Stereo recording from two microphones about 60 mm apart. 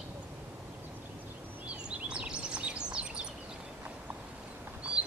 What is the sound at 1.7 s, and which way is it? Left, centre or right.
Bird, centre.